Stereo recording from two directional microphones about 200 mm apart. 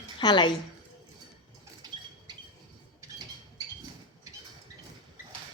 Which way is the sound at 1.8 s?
20° right (ahead or behind).